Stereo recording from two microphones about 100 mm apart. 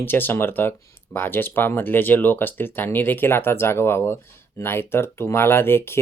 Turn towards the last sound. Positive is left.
turn(degrees=25)  # may be behind; listen again after turning